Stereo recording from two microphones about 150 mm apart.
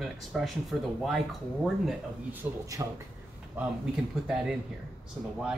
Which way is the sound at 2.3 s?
20° right (ahead or behind).